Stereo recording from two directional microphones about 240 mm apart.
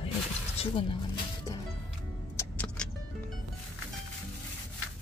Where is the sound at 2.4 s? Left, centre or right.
Centre.